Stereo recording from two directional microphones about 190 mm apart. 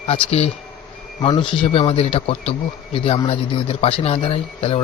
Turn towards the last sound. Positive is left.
turn(degrees=30)  # may be behind; listen again after turning